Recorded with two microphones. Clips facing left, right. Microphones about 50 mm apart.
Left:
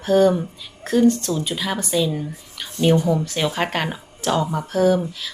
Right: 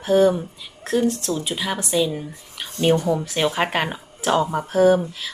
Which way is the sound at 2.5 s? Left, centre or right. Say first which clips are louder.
Left 1 dB; centre.